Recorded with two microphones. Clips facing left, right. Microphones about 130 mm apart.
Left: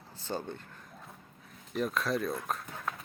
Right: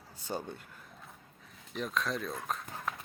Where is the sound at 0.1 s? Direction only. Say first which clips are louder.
Left 1 dB; 10° right (ahead or behind).